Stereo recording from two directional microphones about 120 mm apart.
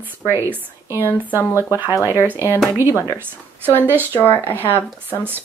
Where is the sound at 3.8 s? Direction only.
15° right (ahead or behind).